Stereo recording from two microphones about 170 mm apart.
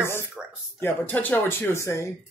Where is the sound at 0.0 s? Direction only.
15° left (ahead or behind).